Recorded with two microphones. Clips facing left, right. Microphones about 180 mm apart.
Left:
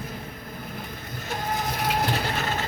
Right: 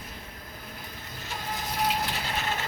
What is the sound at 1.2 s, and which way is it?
Crushing, 55° left (ahead or behind).